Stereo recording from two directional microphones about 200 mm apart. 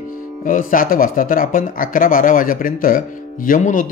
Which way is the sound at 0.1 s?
45° left (ahead or behind).